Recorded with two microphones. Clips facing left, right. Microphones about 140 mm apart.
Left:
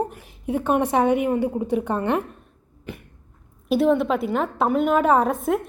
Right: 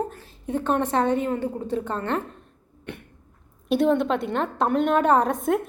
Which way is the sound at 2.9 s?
Centre (ahead or behind).